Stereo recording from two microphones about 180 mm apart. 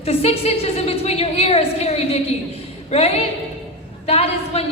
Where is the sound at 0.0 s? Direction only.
35° left (ahead or behind).